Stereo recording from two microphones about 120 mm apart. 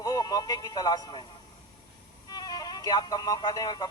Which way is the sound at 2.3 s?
35° left (ahead or behind).